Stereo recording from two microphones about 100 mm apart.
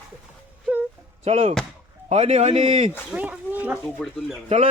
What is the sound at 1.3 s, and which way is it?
A man's voice, 90° right.